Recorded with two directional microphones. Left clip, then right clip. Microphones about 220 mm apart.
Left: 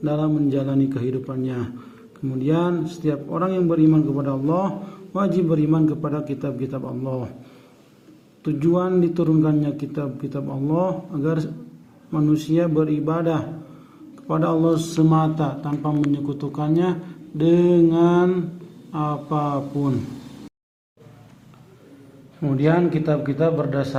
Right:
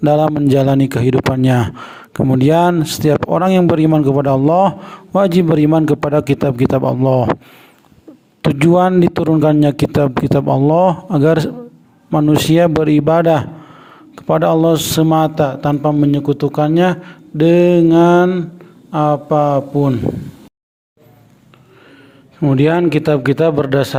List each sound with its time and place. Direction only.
0.0 s a man's voice: 50° right (ahead or behind)
8.4 s a man's voice: 45° right (ahead or behind)
22.4 s a man's voice: 30° right (ahead or behind)
22.6 s a man's voice: 40° right (ahead or behind)